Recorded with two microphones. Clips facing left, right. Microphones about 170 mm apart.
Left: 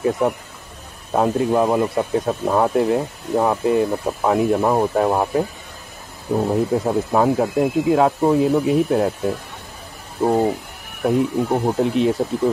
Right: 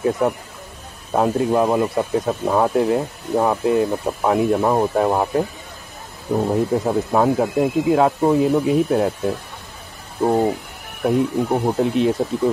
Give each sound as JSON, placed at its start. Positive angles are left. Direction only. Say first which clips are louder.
{"t": 1.1, "sound": "speech", "louder": "even", "side_deg": 0}